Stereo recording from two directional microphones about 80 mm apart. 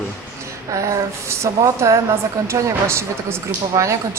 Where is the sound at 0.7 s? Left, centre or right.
Right.